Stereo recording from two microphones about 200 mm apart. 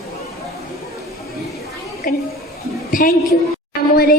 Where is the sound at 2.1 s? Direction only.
45° left (ahead or behind).